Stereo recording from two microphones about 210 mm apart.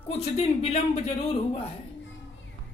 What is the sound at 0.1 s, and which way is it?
Speech, 30° left (ahead or behind).